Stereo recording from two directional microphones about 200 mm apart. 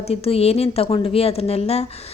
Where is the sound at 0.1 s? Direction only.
30° left (ahead or behind).